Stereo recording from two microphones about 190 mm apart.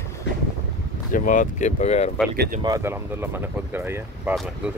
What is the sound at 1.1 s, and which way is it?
Speech, 45° left (ahead or behind).